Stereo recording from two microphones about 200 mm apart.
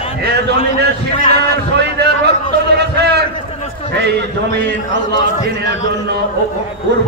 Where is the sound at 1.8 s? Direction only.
55° right (ahead or behind).